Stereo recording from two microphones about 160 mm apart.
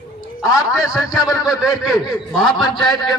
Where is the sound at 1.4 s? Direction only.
Centre (ahead or behind).